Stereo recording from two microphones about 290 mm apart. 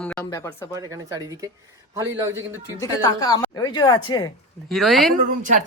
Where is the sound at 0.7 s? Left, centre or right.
Centre.